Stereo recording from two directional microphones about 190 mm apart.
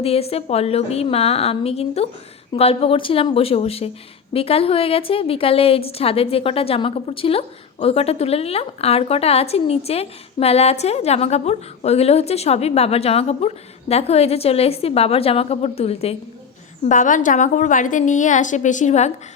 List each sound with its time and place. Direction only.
0.0 s a woman's voice: 30° left (ahead or behind)